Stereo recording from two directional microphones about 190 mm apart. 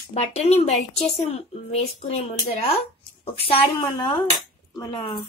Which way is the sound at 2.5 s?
30° left (ahead or behind).